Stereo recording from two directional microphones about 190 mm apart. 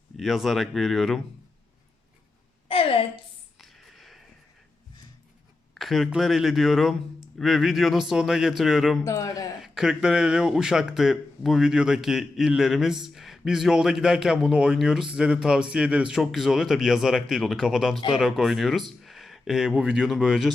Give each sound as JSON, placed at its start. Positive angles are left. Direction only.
{"t": 0.2, "sound": "speech", "side_deg": 0}
{"t": 2.6, "sound": "a sound", "side_deg": 30}
{"t": 3.6, "sound": "a sound", "side_deg": 0}
{"t": 5.7, "sound": "speech", "side_deg": 0}
{"t": 9.0, "sound": "a man's voice", "side_deg": 15}
{"t": 9.6, "sound": "speech", "side_deg": 0}